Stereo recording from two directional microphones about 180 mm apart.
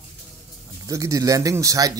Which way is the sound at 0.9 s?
20° right (ahead or behind).